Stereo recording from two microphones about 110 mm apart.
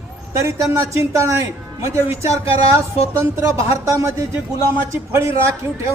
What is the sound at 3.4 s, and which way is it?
Speech, 30° right (ahead or behind).